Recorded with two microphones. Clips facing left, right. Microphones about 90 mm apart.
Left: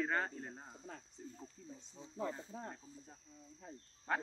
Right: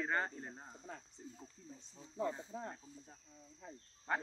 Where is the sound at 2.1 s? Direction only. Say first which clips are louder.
Right 2 dB; 10° right (ahead or behind).